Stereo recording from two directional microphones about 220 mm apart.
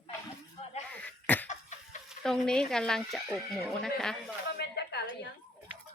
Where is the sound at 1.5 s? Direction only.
35° left (ahead or behind).